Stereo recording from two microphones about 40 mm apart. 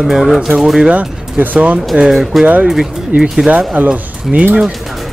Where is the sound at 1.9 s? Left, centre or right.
Right.